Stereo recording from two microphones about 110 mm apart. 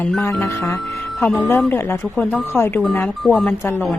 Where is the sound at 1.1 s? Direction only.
5° left (ahead or behind).